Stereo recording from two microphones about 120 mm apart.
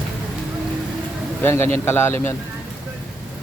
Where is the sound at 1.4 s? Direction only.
20° left (ahead or behind).